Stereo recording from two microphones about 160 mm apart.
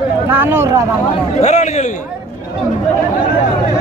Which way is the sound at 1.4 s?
45° left (ahead or behind).